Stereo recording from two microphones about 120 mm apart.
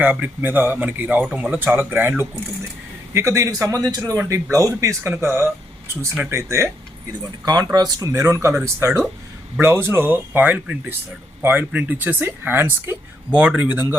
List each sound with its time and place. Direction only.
0.0 s speech: 15° right (ahead or behind)